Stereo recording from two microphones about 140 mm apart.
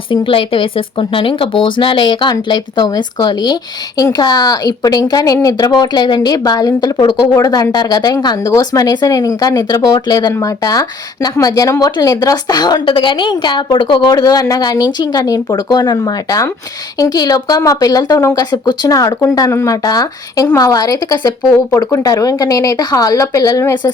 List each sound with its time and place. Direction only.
0.1 s speech: 40° left (ahead or behind); by 23.9 s 25° left (ahead or behind)